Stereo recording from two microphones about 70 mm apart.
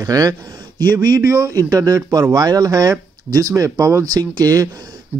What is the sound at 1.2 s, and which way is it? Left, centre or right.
Speech, right.